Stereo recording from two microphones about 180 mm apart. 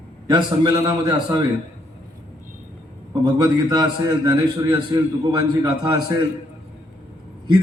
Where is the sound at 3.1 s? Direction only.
20° right (ahead or behind).